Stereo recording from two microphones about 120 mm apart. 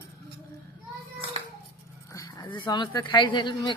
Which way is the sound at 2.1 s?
35° left (ahead or behind).